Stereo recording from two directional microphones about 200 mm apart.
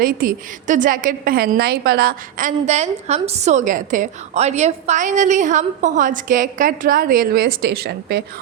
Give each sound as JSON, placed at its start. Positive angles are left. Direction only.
{"t": 0.0, "sound": "a woman's voice", "side_deg": -45}